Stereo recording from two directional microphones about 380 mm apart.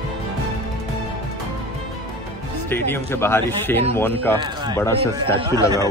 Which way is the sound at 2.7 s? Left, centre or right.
Centre.